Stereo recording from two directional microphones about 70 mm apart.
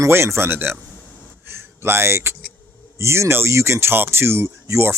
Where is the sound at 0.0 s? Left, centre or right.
Right.